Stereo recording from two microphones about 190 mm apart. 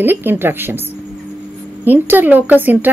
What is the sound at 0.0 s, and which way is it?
Speech, 10° right (ahead or behind).